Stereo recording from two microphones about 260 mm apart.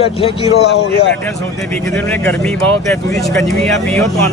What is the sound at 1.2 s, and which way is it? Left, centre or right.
A man's voice, centre.